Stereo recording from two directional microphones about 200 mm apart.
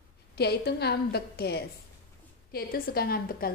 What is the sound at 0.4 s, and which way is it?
A woman's voice, 55° left (ahead or behind).